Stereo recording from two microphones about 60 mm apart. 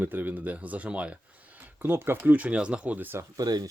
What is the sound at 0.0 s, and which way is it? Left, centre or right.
Speech, right.